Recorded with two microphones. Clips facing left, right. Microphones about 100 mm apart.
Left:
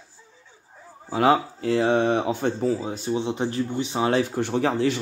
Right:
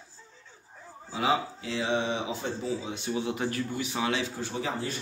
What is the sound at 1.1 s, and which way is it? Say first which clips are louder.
Speech: left 8 dB; 55° left (ahead or behind).